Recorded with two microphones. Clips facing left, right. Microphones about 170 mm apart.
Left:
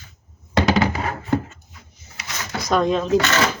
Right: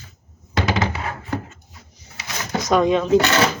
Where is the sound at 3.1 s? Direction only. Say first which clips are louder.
Right 3 dB; 30° right (ahead or behind).